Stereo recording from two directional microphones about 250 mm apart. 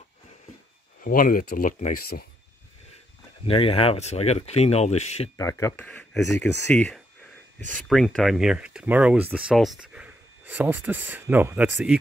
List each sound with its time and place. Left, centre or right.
1.0 s speech: left
3.4 s speech: left
5.4 s speech: centre